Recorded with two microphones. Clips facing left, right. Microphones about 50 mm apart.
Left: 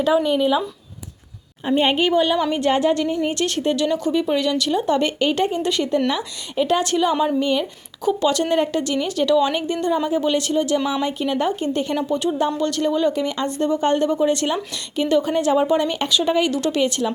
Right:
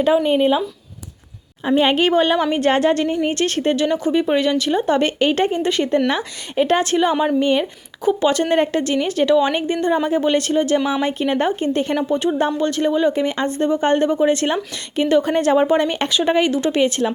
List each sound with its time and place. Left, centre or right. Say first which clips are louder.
0.0 s speech: right 2 dB; right
1.8 s a woman's voice: right 2 dB; right
2.0 s speech: right 2 dB; right
2.6 s a woman's voice: right 2 dB; right
3.2 s speech: right 2 dB; right
7.3 s speech: right 3 dB; right
10.8 s speech: right 2 dB; right
11.0 s speech: right 2 dB; right